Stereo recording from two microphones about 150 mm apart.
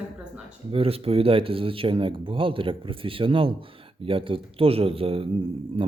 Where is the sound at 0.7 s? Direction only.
40° right (ahead or behind).